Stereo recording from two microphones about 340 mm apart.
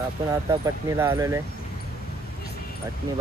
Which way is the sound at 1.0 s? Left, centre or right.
Centre.